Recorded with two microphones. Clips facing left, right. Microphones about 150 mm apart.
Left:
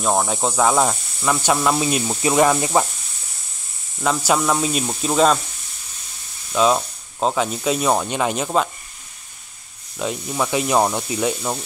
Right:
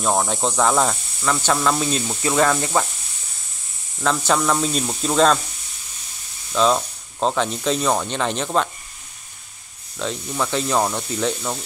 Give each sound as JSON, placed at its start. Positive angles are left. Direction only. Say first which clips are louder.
{"t": 0.0, "sound": "speech", "louder": "left 1 dB", "side_deg": 0}
{"t": 4.0, "sound": "speech", "louder": "left 1 dB", "side_deg": 10}
{"t": 6.5, "sound": "speech", "louder": "left 1 dB", "side_deg": 10}
{"t": 9.9, "sound": "speech", "louder": "left 2 dB", "side_deg": 10}